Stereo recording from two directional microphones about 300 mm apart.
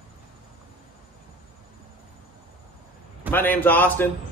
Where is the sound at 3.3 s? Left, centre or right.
Centre.